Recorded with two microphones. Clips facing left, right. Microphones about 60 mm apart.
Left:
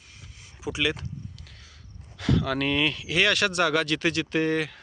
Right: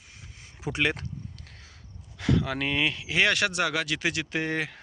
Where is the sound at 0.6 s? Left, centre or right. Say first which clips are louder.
Even; right.